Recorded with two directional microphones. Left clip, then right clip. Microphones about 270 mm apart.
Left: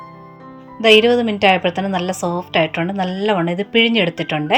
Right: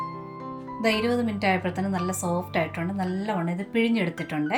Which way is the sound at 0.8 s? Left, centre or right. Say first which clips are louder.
Left 13 dB; left.